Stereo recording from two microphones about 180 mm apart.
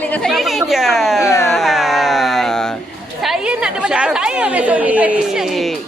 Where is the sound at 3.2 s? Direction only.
5° right (ahead or behind).